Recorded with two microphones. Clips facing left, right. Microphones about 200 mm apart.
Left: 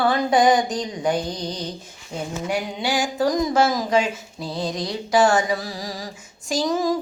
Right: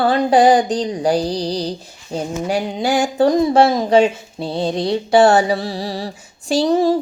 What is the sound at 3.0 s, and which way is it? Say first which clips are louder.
Speech: right 7 dB; 30° right (ahead or behind).